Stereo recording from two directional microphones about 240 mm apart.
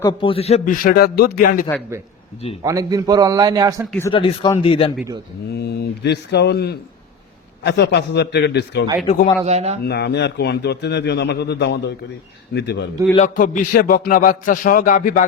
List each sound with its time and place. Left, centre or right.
0.0 s a sound: left
2.6 s a man's voice: centre
4.1 s speech: left
5.5 s a man's voice: left
9.0 s speech: left
9.5 s a man's voice: right
9.8 s a man's voice: left
13.1 s a sound: left